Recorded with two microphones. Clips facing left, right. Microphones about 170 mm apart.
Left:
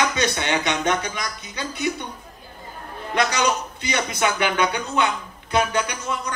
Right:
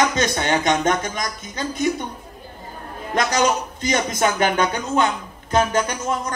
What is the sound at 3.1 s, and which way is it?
A man's voice, 45° right (ahead or behind).